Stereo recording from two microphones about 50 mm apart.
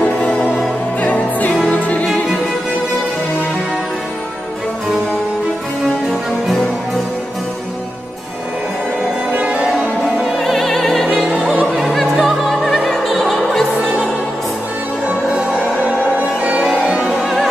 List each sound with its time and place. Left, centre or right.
1.0 s music: left
10.0 s music: centre
11.2 s opera: right
11.6 s opera: centre
16.2 s music: right
17.2 s music: centre